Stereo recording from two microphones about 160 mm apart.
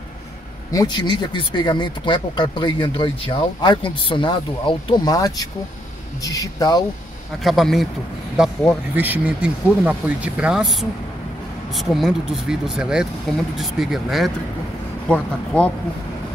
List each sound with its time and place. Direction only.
0.7 s speech: 25° left (ahead or behind)
7.4 s speech: centre (ahead or behind)
8.9 s speech: 10° right (ahead or behind); by 15.7 s 10° left (ahead or behind)